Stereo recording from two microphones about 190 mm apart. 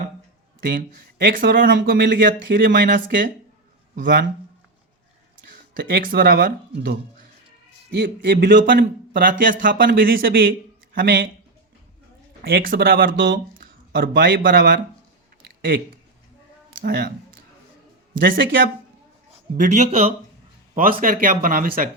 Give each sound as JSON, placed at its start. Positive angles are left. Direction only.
{"t": 0.7, "sound": "speech", "side_deg": -50}
{"t": 5.5, "sound": "speech", "side_deg": -50}
{"t": 7.9, "sound": "a man's voice", "side_deg": -65}
{"t": 11.0, "sound": "speech", "side_deg": -75}
{"t": 12.4, "sound": "speech", "side_deg": -50}
{"t": 14.1, "sound": "speech", "side_deg": -70}
{"t": 14.4, "sound": "speech", "side_deg": -50}
{"t": 16.8, "sound": "a man's voice", "side_deg": -55}
{"t": 18.2, "sound": "speech", "side_deg": -50}
{"t": 19.5, "sound": "speech", "side_deg": -35}
{"t": 20.7, "sound": "speech", "side_deg": -45}